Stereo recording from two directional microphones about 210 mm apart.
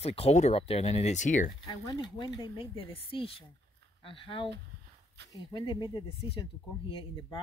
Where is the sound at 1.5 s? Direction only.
20° left (ahead or behind).